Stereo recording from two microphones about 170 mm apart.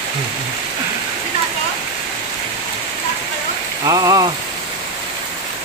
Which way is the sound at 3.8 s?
20° right (ahead or behind).